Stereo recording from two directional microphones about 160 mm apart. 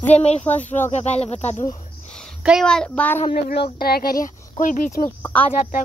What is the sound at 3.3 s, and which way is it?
Speech, 75° left (ahead or behind).